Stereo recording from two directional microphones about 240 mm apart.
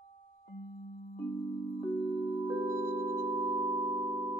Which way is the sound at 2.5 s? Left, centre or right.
Centre.